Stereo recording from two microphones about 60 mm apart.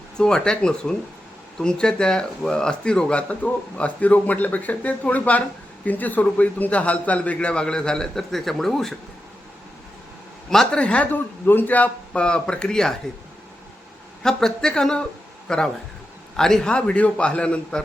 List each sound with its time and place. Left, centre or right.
0.2 s a man's voice: centre
10.5 s a man's voice: centre
11.1 s speech: left
12.2 s a man's voice: centre
14.2 s a man's voice: centre
16.6 s a man's voice: centre